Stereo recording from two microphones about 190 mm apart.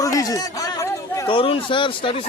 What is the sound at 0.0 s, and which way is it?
A man's voice, 20° left (ahead or behind).